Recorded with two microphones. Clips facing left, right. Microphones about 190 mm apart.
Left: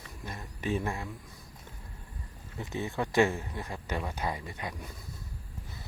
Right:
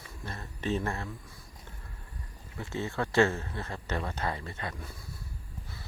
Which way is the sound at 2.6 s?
15° left (ahead or behind).